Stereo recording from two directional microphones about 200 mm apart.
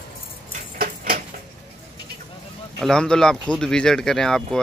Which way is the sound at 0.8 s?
45° right (ahead or behind).